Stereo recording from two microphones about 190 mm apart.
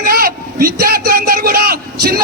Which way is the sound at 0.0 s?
50° right (ahead or behind).